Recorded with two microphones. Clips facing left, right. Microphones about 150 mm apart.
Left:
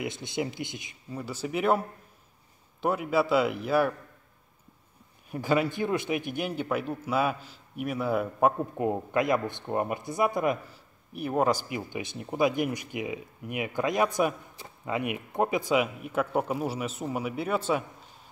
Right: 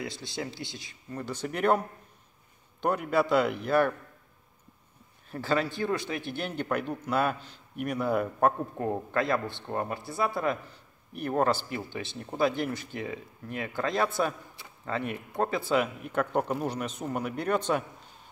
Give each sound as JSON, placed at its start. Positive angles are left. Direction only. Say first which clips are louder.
{"t": 0.0, "sound": "speech", "louder": "left 4 dB", "side_deg": 20}
{"t": 1.1, "sound": "a man's voice", "louder": "left 2 dB", "side_deg": 5}
{"t": 5.3, "sound": "a man's voice", "louder": "left 2 dB", "side_deg": 15}